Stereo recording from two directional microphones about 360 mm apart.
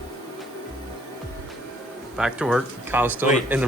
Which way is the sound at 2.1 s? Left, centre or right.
Centre.